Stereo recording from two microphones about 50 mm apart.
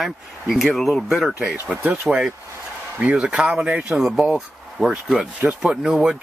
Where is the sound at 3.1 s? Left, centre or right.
Centre.